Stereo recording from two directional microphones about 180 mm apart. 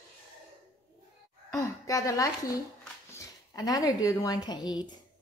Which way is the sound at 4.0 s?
20° left (ahead or behind).